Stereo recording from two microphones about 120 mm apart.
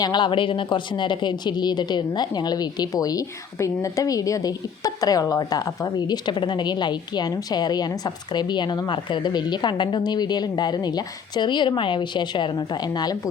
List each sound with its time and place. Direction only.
0.0 s speech: 40° left (ahead or behind)